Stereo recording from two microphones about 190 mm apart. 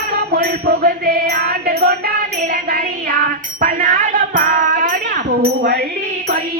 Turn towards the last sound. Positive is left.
turn(degrees=-55)  # may be behind; listen again after turning